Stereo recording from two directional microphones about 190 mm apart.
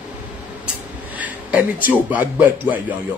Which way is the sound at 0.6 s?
5° right (ahead or behind).